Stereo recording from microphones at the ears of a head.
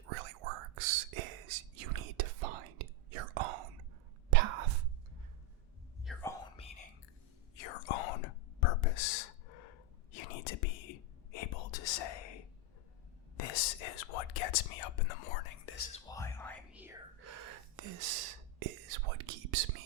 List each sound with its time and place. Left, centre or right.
0.0 s whispering: right
7.5 s whispering: left
17.2 s whispering: right